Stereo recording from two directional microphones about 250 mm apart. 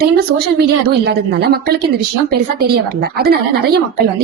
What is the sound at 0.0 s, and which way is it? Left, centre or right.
Speech, right.